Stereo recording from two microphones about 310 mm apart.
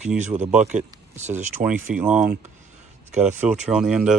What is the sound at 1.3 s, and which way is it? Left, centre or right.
Speech, centre.